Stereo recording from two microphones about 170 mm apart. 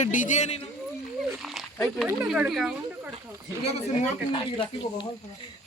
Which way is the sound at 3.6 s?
40° left (ahead or behind).